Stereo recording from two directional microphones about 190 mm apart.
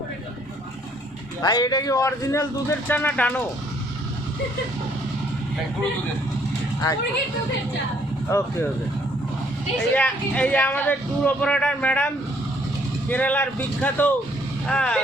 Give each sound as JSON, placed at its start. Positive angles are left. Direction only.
{"t": 1.4, "sound": "speech", "side_deg": 20}
{"t": 8.3, "sound": "speech", "side_deg": 15}
{"t": 9.7, "sound": "speech", "side_deg": 5}